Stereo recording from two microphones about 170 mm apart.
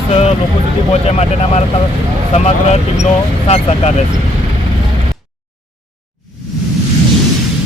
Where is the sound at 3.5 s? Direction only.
35° left (ahead or behind).